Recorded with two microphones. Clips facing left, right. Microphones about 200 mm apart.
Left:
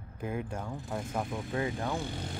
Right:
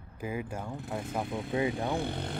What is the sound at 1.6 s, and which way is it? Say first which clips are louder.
Speech: right 3 dB; 20° right (ahead or behind).